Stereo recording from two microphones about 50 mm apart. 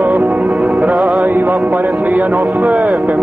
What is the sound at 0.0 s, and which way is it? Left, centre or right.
Music, right.